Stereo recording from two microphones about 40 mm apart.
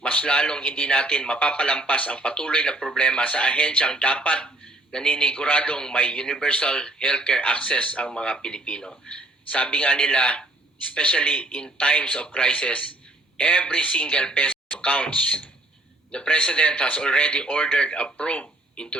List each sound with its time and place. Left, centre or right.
0.0 s speech: left
17.7 s speech: left
18.3 s a sound: left